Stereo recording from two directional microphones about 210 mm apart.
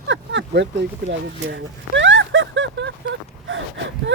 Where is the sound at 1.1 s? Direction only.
60° right (ahead or behind).